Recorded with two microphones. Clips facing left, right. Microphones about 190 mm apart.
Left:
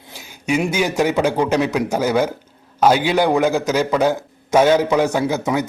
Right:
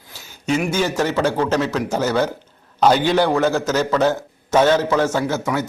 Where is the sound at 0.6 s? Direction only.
15° left (ahead or behind).